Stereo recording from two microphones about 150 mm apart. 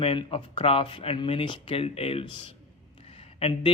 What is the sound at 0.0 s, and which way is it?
Speech, 40° left (ahead or behind).